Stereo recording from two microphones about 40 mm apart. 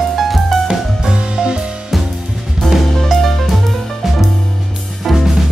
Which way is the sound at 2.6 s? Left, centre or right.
Centre.